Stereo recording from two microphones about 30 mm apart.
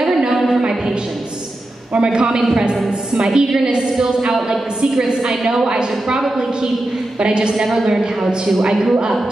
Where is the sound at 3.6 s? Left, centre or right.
Right.